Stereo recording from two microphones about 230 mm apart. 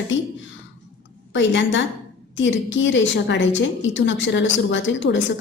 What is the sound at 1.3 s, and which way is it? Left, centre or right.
A woman's voice, left.